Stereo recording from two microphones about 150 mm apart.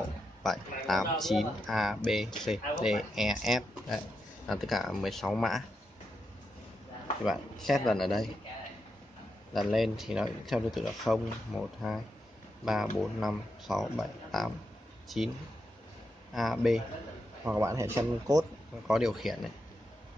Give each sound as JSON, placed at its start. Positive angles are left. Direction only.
{"t": 0.4, "sound": "speech", "side_deg": 0}
{"t": 7.2, "sound": "speech", "side_deg": 0}
{"t": 9.5, "sound": "speech", "side_deg": 0}
{"t": 13.0, "sound": "speech", "side_deg": 0}
{"t": 16.3, "sound": "speech", "side_deg": 0}
{"t": 17.5, "sound": "speech", "side_deg": -20}
{"t": 18.9, "sound": "speech", "side_deg": 0}